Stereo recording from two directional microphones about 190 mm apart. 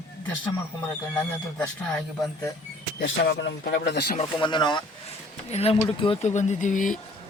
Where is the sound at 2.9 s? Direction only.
70° left (ahead or behind).